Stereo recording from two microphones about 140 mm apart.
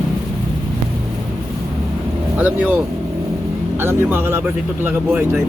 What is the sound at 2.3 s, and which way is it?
Speech, 10° right (ahead or behind).